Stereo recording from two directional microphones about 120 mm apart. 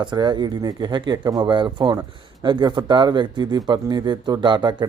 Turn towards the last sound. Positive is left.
turn(degrees=-40)  # may be behind; listen again after turning